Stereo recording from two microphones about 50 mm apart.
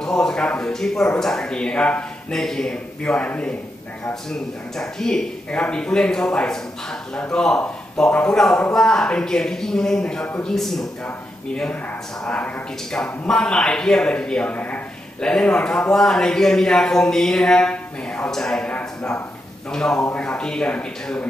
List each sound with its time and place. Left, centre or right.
0.0 s speech: centre
2.3 s speech: centre; by 3.5 s left
4.0 s a man's voice: centre
12.9 s a man's voice: centre; by 14.8 s left
15.1 s speech: centre
19.7 s speech: centre